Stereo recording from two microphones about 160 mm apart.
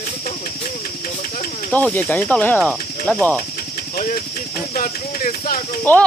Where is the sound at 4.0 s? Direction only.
55° left (ahead or behind).